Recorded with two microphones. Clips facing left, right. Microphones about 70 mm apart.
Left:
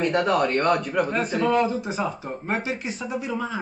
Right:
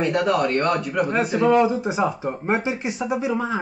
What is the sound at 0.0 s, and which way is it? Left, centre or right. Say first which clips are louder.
A man's voice: right 1 dB; centre.